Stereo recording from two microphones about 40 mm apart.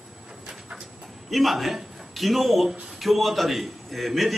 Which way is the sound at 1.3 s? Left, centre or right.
Centre.